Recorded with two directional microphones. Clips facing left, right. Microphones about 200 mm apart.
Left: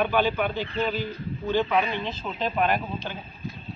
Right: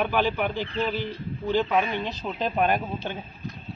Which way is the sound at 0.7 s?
15° left (ahead or behind).